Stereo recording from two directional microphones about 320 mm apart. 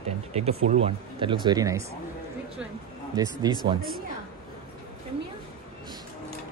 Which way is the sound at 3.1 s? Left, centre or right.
Centre.